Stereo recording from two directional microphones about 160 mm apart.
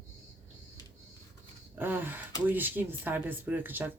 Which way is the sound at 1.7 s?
15° right (ahead or behind).